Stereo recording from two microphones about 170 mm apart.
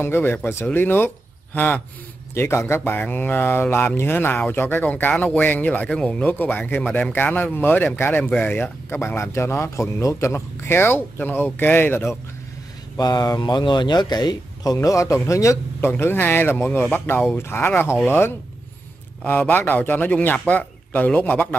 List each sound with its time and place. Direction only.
0.0 s speech: 15° left (ahead or behind)